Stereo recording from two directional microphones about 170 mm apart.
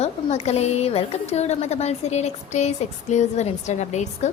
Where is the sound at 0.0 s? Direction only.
40° left (ahead or behind).